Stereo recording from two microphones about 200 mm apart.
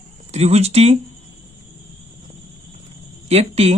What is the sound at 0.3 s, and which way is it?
Speech, 35° right (ahead or behind).